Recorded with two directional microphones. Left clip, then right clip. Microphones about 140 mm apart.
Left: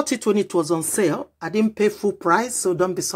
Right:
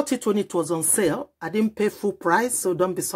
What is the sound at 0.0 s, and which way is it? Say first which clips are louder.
Speech: left 3 dB; 10° right (ahead or behind).